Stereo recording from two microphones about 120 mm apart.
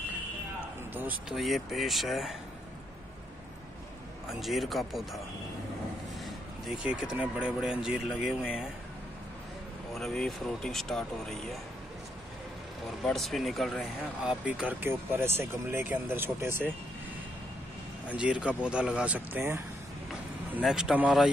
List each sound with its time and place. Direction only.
1.3 s speech: centre (ahead or behind)
4.4 s speech: centre (ahead or behind)
6.2 s speech: 10° right (ahead or behind)
9.9 s speech: 5° left (ahead or behind)
13.0 s speech: centre (ahead or behind)
14.2 s speech: 10° right (ahead or behind)
18.0 s speech: 10° right (ahead or behind)
20.6 s speech: 5° right (ahead or behind)